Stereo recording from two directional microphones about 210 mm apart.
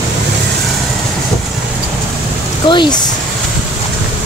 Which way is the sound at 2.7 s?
20° left (ahead or behind).